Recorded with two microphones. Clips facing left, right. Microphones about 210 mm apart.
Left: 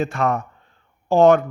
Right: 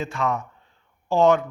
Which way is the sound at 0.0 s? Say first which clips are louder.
Left 4 dB; 55° left (ahead or behind).